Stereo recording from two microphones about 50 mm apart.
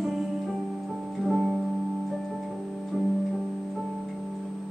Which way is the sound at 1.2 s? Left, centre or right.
Centre.